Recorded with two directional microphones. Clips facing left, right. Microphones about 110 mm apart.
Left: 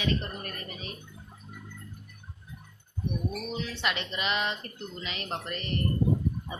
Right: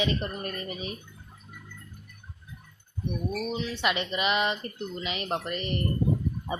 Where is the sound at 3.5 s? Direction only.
5° right (ahead or behind).